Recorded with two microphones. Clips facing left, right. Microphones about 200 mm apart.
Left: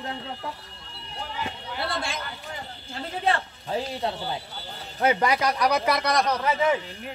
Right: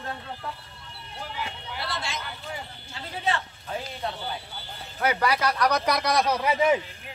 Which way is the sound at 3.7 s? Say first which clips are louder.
Left 5 dB; 30° left (ahead or behind).